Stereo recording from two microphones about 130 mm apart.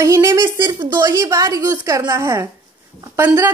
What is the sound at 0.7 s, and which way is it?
Speech, 35° right (ahead or behind).